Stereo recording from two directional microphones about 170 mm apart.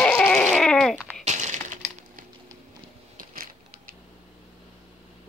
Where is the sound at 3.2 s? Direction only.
55° right (ahead or behind).